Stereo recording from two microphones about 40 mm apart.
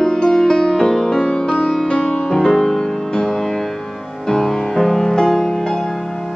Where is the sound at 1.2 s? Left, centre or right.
Left.